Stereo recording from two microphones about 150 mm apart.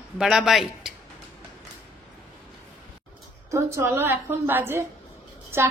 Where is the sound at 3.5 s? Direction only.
15° right (ahead or behind).